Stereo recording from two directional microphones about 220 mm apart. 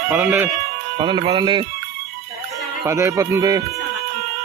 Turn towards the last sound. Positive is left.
turn(degrees=-15)  # may be behind; listen again after turning